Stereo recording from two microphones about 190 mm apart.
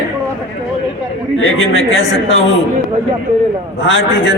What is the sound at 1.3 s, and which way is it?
A man's voice, 90° left.